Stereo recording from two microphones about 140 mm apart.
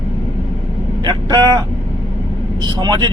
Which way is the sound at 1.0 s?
30° right (ahead or behind).